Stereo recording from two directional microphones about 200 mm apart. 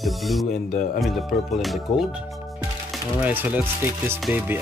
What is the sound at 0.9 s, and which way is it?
Speech, centre (ahead or behind).